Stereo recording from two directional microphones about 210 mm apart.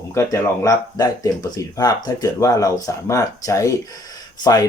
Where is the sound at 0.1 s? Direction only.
15° left (ahead or behind).